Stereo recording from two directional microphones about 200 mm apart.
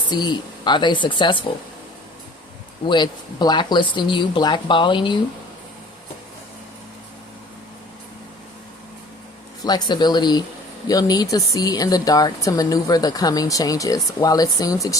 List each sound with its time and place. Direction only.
0.1 s speech: 20° left (ahead or behind)
2.8 s speech: 20° left (ahead or behind)
9.6 s speech: 20° left (ahead or behind)